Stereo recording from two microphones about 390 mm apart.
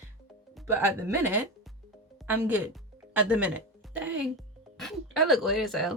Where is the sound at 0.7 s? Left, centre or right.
Centre.